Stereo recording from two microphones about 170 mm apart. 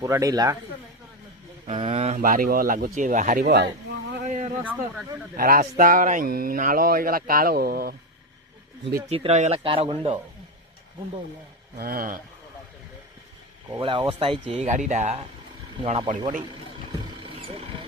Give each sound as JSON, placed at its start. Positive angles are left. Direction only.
{"t": 0.0, "sound": "speech", "side_deg": -20}
{"t": 1.6, "sound": "speech", "side_deg": -40}
{"t": 3.4, "sound": "speech", "side_deg": -75}
{"t": 4.3, "sound": "a sound", "side_deg": -45}
{"t": 4.6, "sound": "speech", "side_deg": -10}
{"t": 5.4, "sound": "speech", "side_deg": -55}
{"t": 9.0, "sound": "speech", "side_deg": -35}
{"t": 11.8, "sound": "speech", "side_deg": -60}
{"t": 13.7, "sound": "speech", "side_deg": -25}
{"t": 17.1, "sound": "vehicle", "side_deg": -35}